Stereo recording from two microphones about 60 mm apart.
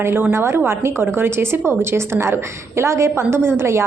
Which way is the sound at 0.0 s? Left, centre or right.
Right.